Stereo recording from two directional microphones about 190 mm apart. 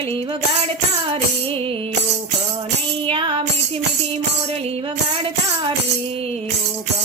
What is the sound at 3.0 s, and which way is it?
Music, 25° right (ahead or behind).